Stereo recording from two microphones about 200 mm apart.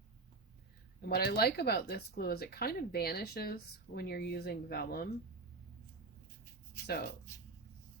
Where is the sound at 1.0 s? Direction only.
50° left (ahead or behind).